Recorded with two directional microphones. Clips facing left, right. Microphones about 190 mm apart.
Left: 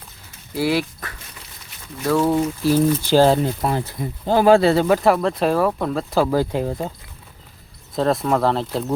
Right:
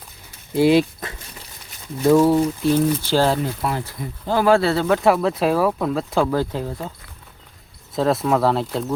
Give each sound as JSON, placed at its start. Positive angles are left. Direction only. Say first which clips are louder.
{"t": 0.5, "sound": "speech", "louder": "right 5 dB", "side_deg": -20}
{"t": 2.3, "sound": "speech", "louder": "right 1 dB", "side_deg": 5}
{"t": 4.9, "sound": "speech", "louder": "even", "side_deg": 0}
{"t": 6.7, "sound": "speech", "louder": "left 4 dB", "side_deg": 25}
{"t": 7.9, "sound": "speech", "louder": "even", "side_deg": 0}